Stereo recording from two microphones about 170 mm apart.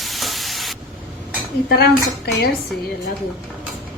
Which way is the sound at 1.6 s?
70° left (ahead or behind).